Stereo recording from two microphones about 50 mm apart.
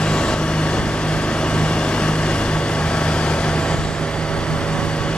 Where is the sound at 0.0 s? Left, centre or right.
Centre.